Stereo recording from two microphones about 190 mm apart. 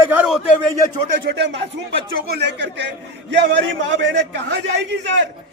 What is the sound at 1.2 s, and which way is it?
Speech, 60° right (ahead or behind).